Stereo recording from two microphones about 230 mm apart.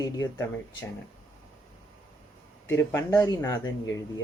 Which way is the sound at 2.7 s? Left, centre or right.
Centre.